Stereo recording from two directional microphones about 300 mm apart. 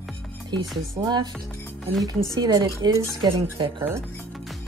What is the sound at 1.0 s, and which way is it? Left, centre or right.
Speech, centre.